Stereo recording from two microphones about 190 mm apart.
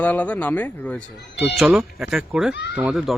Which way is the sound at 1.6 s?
Centre (ahead or behind).